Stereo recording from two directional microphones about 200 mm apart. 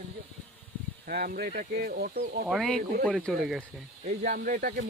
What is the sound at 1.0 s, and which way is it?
Speech, 45° right (ahead or behind).